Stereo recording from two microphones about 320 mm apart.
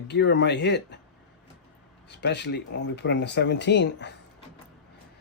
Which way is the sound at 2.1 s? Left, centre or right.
Left.